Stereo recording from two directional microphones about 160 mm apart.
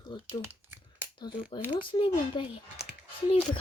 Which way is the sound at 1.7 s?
30° left (ahead or behind).